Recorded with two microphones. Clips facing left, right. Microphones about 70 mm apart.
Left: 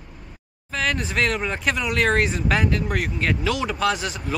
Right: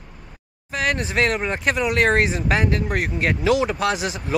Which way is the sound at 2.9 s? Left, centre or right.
Right.